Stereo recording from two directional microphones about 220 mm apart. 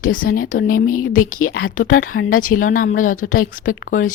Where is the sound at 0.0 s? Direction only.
40° left (ahead or behind).